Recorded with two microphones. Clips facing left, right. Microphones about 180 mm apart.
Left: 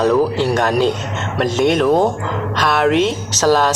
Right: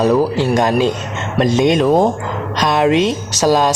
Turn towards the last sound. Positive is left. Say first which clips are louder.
# right 1 dB
turn(degrees=-15)  # may be behind; listen again after turning